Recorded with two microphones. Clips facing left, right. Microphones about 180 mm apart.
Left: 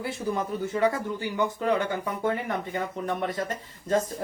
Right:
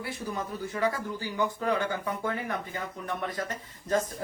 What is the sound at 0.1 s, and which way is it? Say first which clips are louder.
Speech: left 5 dB; 25° left (ahead or behind).